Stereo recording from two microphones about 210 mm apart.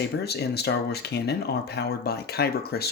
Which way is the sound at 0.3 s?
50° left (ahead or behind).